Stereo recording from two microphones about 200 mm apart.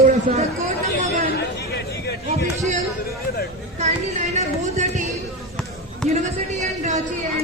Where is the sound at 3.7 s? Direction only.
35° right (ahead or behind).